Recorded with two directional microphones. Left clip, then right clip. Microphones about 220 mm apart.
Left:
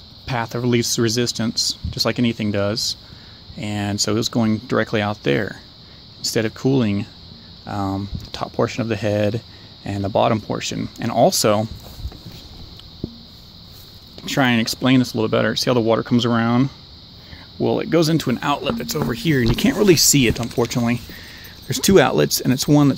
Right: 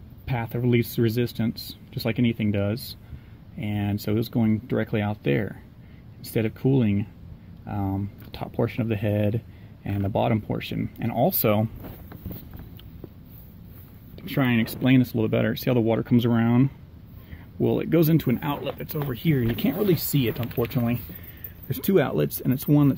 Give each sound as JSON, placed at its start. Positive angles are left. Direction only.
{"t": 0.3, "sound": "speech", "side_deg": 5}
{"t": 14.2, "sound": "speech", "side_deg": 10}